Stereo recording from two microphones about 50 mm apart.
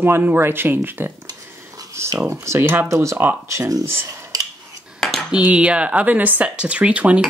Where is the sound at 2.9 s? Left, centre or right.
Right.